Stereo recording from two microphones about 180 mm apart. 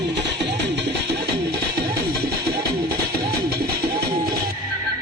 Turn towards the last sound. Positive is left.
turn(degrees=-60)  # may be behind; listen again after turning